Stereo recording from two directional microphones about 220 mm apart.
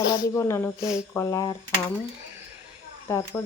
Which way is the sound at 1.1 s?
15° left (ahead or behind).